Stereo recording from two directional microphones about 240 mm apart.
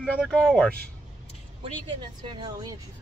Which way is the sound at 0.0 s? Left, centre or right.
Centre.